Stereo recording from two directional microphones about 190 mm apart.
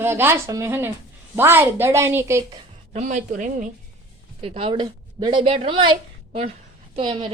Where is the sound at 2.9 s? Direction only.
40° right (ahead or behind).